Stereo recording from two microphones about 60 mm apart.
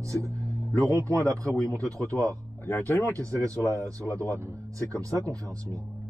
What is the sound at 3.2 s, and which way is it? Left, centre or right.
Speech, right.